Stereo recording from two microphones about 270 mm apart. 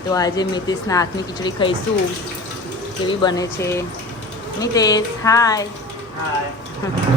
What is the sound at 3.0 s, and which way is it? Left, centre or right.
Speech, centre.